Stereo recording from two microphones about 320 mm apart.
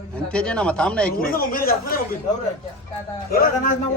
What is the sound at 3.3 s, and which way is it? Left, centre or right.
Speech, left.